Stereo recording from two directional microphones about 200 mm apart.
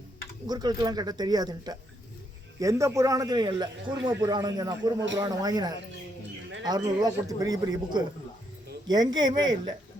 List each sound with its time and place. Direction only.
0.4 s a man's voice: 20° right (ahead or behind)